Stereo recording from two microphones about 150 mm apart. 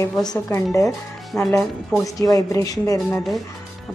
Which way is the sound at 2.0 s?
25° left (ahead or behind).